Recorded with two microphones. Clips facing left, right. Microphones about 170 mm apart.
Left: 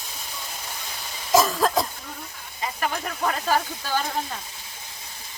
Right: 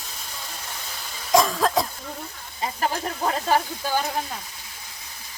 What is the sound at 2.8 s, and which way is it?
Speech, 30° right (ahead or behind).